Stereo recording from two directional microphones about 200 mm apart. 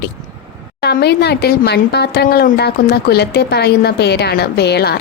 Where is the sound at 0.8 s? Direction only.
55° left (ahead or behind).